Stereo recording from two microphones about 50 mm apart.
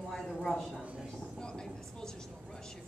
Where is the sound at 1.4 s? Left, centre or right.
Centre.